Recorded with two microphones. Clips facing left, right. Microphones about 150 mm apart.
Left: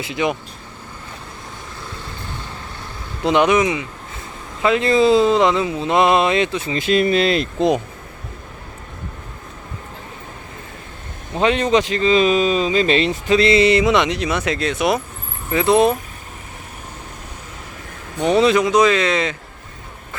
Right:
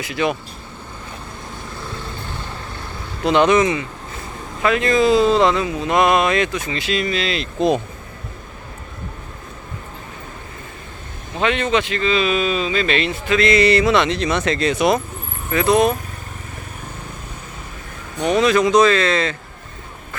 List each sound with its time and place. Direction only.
0.0 s speech: 20° left (ahead or behind)
3.2 s speech: 15° left (ahead or behind)
4.6 s speech: 25° left (ahead or behind)
6.7 s speech: 50° left (ahead or behind)
11.3 s speech: 35° left (ahead or behind); by 15.0 s 5° left (ahead or behind)
15.5 s speech: 25° left (ahead or behind)
18.2 s speech: 25° left (ahead or behind)
18.6 s speech: 10° left (ahead or behind)